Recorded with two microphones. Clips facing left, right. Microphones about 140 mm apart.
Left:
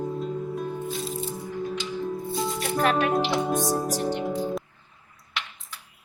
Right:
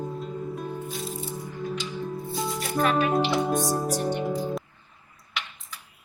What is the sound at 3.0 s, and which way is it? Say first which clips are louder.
Music: even; centre (ahead or behind).